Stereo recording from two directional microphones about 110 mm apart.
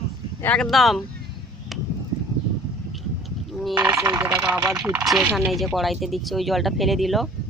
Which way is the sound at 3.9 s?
30° right (ahead or behind).